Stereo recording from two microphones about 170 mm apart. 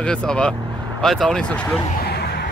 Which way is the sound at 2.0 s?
70° left (ahead or behind).